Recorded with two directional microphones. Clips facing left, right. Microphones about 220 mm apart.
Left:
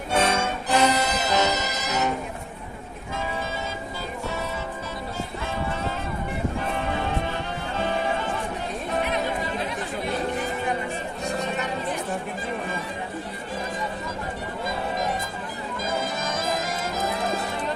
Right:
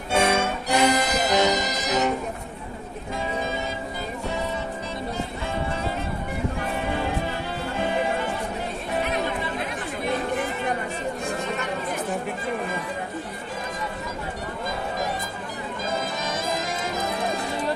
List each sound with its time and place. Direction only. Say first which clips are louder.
0.1 s music: right 2 dB; 10° right (ahead or behind)